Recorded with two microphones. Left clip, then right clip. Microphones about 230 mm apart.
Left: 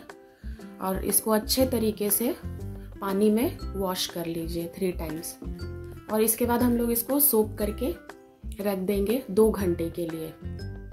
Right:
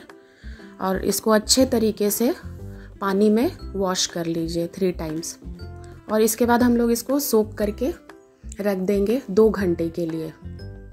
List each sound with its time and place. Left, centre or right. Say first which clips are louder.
0.7 s a woman's voice: right 6 dB; right